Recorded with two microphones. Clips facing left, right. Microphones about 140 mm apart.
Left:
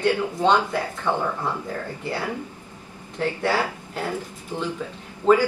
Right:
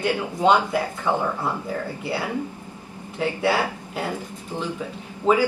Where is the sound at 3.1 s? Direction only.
10° right (ahead or behind).